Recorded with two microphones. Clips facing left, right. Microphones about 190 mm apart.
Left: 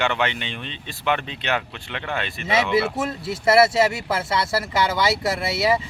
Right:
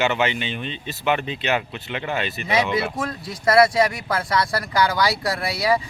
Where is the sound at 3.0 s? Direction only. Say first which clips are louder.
Left 2 dB; 25° left (ahead or behind).